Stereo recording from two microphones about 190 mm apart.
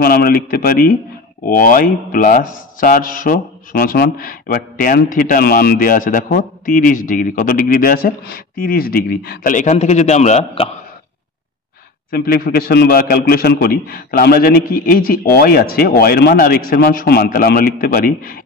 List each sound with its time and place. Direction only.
0.0 s speech: 55° left (ahead or behind); by 10.7 s 35° left (ahead or behind)
12.1 s speech: 50° left (ahead or behind)